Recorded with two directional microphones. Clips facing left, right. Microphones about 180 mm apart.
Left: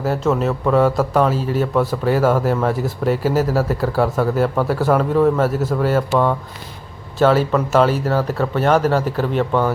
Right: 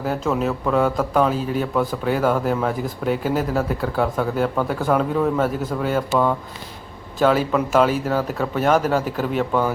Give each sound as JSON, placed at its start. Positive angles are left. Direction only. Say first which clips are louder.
{"t": 0.0, "sound": "a man's voice", "louder": "left 3 dB", "side_deg": 0}
{"t": 7.3, "sound": "speech", "louder": "left 2 dB", "side_deg": -10}